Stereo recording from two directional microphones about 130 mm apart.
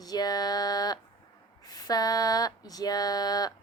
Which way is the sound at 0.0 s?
30° left (ahead or behind).